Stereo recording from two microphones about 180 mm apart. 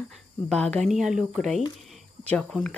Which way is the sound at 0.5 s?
5° left (ahead or behind).